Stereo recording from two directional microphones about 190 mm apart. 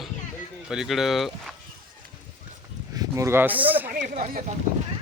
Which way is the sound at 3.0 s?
15° right (ahead or behind).